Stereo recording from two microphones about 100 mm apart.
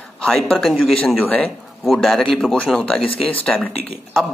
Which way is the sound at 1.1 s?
15° left (ahead or behind).